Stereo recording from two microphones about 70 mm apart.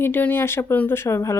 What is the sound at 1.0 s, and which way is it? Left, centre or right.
Speech, left.